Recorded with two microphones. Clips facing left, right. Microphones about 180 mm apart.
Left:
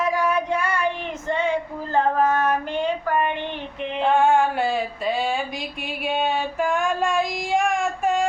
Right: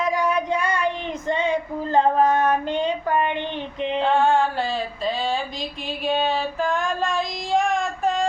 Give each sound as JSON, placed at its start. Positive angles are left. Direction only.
{"t": 0.0, "sound": "child singing", "side_deg": -15}
{"t": 1.3, "sound": "female singing", "side_deg": -20}
{"t": 4.0, "sound": "a sound", "side_deg": 15}
{"t": 6.1, "sound": "child singing", "side_deg": 10}